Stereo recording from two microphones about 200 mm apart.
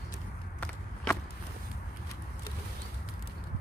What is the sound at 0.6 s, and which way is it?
Walk, 5° left (ahead or behind).